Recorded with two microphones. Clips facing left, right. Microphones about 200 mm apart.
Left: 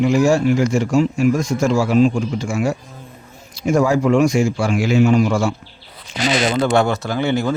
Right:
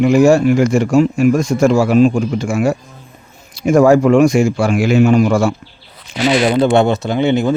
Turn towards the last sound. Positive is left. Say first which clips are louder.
# right 5 dB
turn(degrees=-20)  # may be behind; listen again after turning